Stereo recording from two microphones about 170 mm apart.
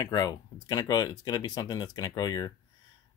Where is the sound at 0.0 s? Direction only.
20° left (ahead or behind).